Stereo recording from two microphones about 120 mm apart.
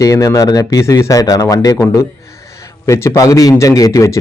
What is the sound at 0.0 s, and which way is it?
Speech, 25° left (ahead or behind).